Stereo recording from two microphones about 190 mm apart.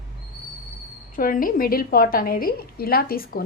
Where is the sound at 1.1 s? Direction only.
45° left (ahead or behind).